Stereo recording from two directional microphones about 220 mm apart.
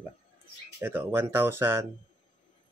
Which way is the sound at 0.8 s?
10° right (ahead or behind).